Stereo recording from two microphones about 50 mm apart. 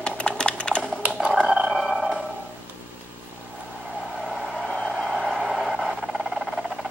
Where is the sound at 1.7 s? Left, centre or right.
Centre.